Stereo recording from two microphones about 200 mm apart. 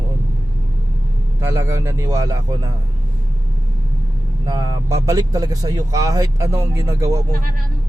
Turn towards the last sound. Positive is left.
turn(degrees=-15)  # may be behind; listen again after turning